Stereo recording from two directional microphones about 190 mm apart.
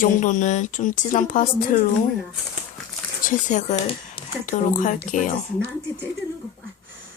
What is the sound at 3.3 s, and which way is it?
A woman's voice, 40° left (ahead or behind).